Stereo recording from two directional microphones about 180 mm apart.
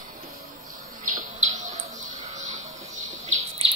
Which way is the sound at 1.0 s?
45° right (ahead or behind).